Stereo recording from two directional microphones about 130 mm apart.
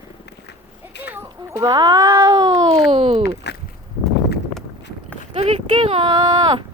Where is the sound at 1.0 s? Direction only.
15° right (ahead or behind).